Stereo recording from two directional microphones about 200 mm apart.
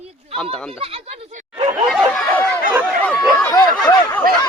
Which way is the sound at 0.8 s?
30° right (ahead or behind).